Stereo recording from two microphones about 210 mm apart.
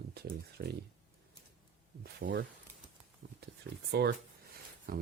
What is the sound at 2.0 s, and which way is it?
Speech, 45° right (ahead or behind).